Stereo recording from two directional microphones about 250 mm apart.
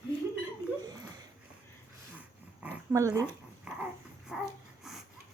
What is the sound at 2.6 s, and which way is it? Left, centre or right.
Dog, centre.